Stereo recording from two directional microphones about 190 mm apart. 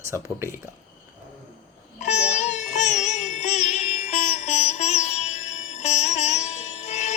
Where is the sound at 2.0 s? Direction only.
35° left (ahead or behind).